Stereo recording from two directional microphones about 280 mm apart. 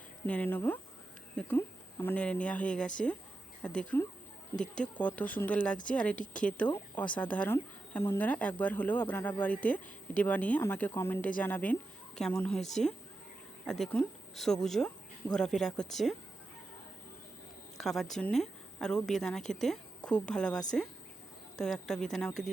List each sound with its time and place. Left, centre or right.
0.3 s a woman's voice: centre
4.5 s speech: left
4.8 s a woman's voice: centre
17.7 s a woman's voice: centre
21.6 s a woman's voice: centre